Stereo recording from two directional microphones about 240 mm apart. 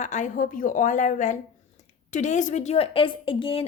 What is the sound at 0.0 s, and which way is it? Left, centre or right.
A woman's voice, left.